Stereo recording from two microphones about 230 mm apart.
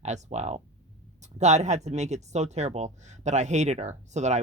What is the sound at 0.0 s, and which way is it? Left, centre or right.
Speech, right.